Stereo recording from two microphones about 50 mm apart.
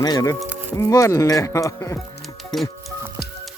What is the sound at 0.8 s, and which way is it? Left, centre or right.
Speech, left.